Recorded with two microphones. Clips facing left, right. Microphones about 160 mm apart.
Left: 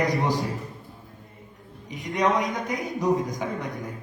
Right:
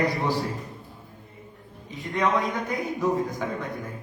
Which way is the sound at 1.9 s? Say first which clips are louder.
Left 1 dB; 15° left (ahead or behind).